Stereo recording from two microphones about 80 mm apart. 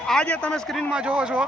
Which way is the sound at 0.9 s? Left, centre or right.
Centre.